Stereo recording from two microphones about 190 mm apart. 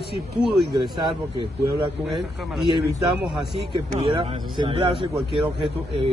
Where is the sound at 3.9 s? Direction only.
30° right (ahead or behind).